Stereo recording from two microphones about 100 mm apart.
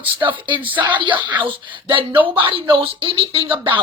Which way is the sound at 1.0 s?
55° right (ahead or behind).